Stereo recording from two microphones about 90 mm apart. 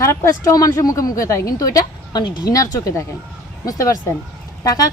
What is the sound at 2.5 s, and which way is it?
Speech, 35° left (ahead or behind).